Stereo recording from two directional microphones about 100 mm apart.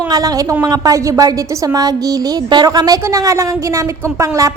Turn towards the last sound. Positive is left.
turn(degrees=-30)  # may be behind; listen again after turning